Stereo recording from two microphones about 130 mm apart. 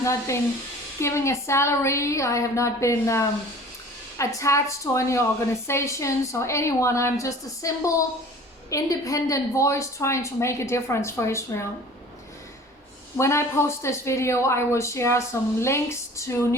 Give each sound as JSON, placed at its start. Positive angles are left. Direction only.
{"t": 0.0, "sound": "speech", "side_deg": 20}
{"t": 13.1, "sound": "speech", "side_deg": 20}